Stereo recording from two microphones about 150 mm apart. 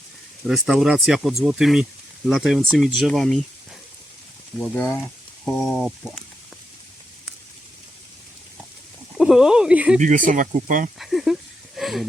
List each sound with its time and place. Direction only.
0.4 s speech: centre (ahead or behind)
4.6 s speech: 10° left (ahead or behind)
9.1 s speech: 5° right (ahead or behind)
10.0 s speech: 60° right (ahead or behind)
10.9 s a sound: centre (ahead or behind)